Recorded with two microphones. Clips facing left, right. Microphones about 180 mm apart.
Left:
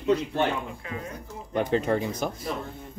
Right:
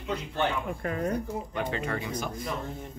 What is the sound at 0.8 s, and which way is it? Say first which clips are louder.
Speech: right 6 dB; 55° right (ahead or behind).